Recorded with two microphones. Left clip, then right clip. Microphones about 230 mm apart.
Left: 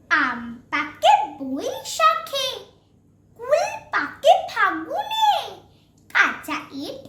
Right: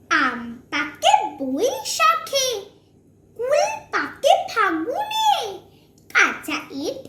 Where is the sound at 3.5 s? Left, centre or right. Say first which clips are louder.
Even; centre.